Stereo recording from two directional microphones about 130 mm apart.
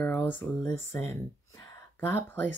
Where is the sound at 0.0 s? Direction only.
15° left (ahead or behind).